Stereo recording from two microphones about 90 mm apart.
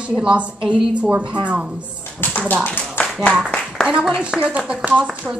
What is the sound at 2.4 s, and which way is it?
Speech, 20° left (ahead or behind).